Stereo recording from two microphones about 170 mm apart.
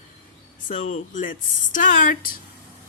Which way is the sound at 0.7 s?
45° left (ahead or behind).